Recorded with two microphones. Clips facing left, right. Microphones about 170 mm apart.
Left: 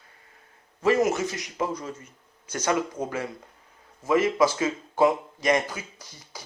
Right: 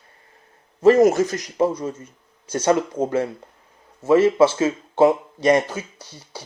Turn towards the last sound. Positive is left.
turn(degrees=-30)  # may be behind; listen again after turning